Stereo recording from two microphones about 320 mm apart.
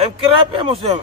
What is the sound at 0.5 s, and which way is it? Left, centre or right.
Music, centre.